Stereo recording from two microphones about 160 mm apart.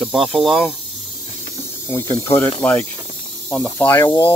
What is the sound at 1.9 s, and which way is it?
Speech, 20° left (ahead or behind).